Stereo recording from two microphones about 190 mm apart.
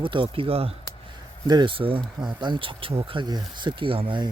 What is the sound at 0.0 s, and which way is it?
Speech, 25° right (ahead or behind).